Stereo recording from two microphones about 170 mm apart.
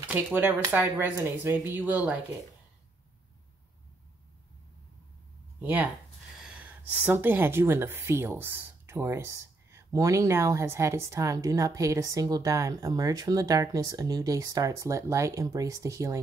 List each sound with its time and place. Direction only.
0.1 s speech: 10° right (ahead or behind)
5.6 s speech: 10° right (ahead or behind)